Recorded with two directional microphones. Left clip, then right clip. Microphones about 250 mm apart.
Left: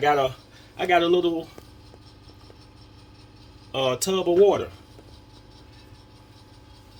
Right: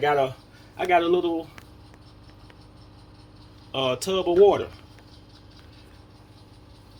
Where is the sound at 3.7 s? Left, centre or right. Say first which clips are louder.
Left 1 dB; left.